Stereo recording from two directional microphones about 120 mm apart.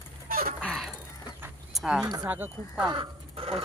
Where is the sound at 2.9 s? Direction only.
50° right (ahead or behind).